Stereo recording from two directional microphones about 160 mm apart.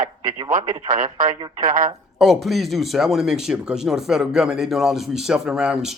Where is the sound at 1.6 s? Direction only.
55° right (ahead or behind).